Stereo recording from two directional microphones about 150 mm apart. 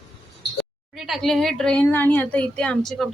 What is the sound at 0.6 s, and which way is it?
A woman's voice, centre (ahead or behind).